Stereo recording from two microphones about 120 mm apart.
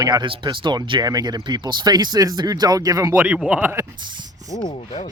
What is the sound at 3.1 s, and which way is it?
Speech, 10° right (ahead or behind).